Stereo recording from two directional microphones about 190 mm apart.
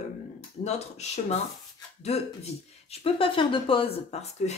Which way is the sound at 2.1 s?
35° left (ahead or behind).